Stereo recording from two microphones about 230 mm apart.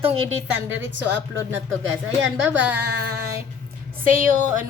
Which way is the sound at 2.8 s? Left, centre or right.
Right.